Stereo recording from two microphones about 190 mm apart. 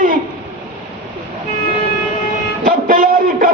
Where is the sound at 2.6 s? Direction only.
45° right (ahead or behind).